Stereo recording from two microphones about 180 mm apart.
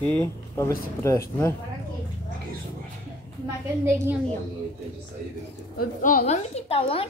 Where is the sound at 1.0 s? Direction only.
15° left (ahead or behind).